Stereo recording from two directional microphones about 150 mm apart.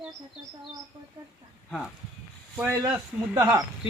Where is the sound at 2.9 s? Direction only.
15° right (ahead or behind).